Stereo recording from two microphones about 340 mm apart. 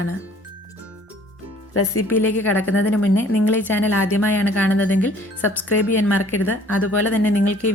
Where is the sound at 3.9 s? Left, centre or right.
Left.